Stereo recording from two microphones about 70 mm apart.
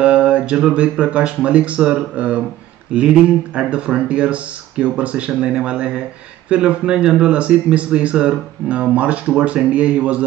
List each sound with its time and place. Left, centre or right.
0.0 s speech: centre